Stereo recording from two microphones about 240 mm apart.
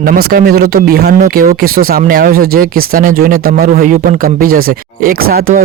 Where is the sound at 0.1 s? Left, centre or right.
Right.